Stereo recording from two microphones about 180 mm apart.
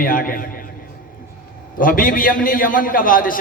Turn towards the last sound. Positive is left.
turn(degrees=50)  # may be behind; listen again after turning